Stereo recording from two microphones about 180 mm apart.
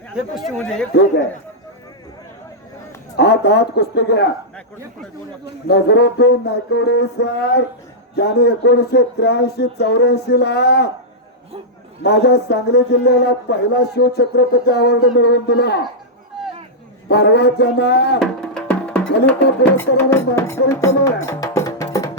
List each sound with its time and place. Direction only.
0.5 s speech: 5° left (ahead or behind)
3.2 s speech: 65° left (ahead or behind)
5.6 s a man's voice: 70° left (ahead or behind)
12.0 s a man's voice: 65° left (ahead or behind)
17.1 s a man's voice: 65° left (ahead or behind)
18.2 s music: 5° left (ahead or behind); by 22.2 s 20° left (ahead or behind)